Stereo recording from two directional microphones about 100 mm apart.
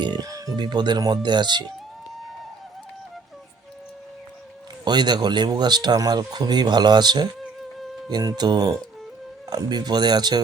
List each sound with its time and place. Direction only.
0.0 s a sound: 45° right (ahead or behind)
0.5 s speech: 45° right (ahead or behind)
4.9 s speech: 45° right (ahead or behind)